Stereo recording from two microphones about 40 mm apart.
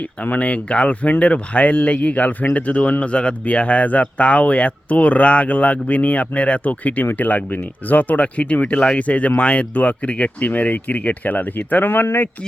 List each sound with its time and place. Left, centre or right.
0.0 s speech: left
3.0 s speech: left